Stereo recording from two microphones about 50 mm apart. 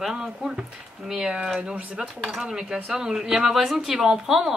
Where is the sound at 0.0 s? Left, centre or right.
Centre.